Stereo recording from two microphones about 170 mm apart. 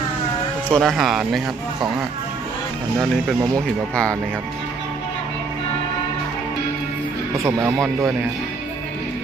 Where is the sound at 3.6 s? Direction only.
5° left (ahead or behind).